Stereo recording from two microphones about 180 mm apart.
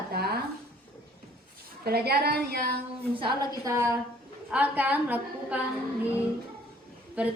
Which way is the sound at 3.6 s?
15° right (ahead or behind).